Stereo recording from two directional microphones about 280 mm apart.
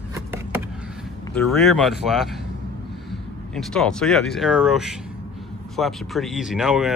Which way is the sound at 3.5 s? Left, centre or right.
Centre.